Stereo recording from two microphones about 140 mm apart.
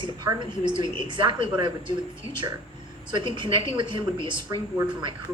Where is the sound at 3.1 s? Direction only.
35° right (ahead or behind).